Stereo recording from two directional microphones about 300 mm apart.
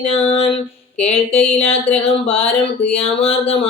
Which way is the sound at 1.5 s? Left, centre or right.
Left.